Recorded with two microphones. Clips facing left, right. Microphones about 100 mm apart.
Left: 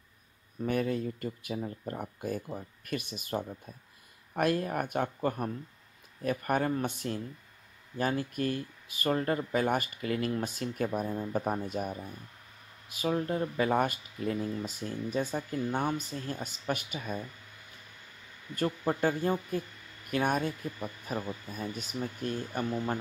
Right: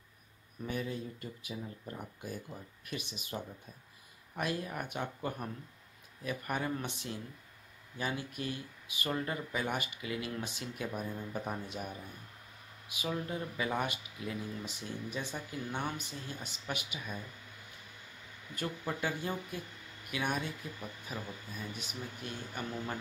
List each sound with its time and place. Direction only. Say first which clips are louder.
0.7 s speech: left 8 dB; 60° left (ahead or behind)
10.9 s speech: left 7 dB; 35° left (ahead or behind)
18.5 s speech: left 7 dB; 40° left (ahead or behind)